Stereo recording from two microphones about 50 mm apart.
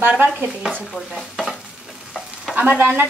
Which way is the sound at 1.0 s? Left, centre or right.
Centre.